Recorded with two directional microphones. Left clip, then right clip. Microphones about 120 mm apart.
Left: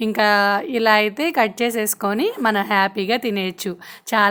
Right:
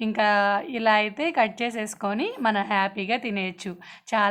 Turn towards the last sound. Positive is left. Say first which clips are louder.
# left 6 dB
turn(degrees=40)  # may be behind; listen again after turning